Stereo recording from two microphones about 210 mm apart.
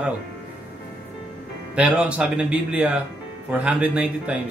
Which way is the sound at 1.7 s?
5° right (ahead or behind).